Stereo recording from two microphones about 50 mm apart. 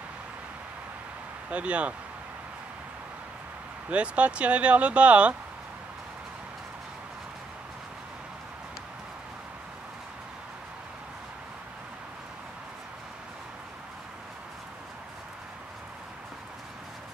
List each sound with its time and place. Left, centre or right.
1.5 s speech: right
3.9 s speech: right